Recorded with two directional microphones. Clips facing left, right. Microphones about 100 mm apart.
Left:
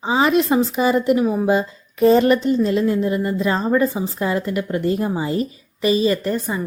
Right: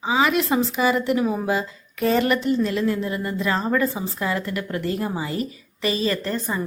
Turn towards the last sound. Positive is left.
turn(degrees=15)  # may be behind; listen again after turning